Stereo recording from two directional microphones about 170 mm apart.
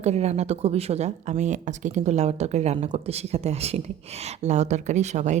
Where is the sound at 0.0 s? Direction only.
40° right (ahead or behind).